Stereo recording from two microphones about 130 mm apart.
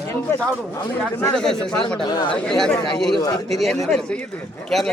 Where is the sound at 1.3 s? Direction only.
5° left (ahead or behind).